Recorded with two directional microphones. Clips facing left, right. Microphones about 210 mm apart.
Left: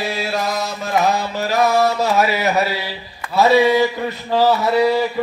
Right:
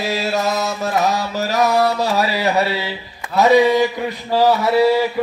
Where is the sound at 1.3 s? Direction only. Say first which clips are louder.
Right 1 dB; 40° right (ahead or behind).